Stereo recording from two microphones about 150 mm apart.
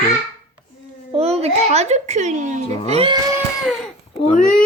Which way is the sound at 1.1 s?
45° right (ahead or behind).